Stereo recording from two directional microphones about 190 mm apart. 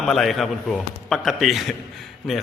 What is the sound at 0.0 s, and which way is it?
A man's voice, centre (ahead or behind).